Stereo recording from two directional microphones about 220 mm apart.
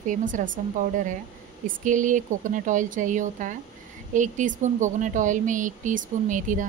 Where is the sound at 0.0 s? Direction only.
35° right (ahead or behind).